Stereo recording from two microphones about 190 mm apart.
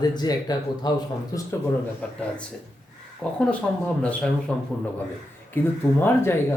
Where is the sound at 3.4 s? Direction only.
5° left (ahead or behind).